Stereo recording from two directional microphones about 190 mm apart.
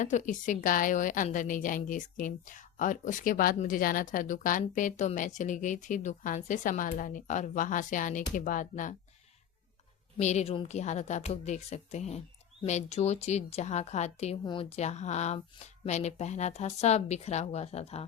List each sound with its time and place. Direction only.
0.0 s a woman's voice: 40° left (ahead or behind)
10.2 s a woman's voice: 35° left (ahead or behind)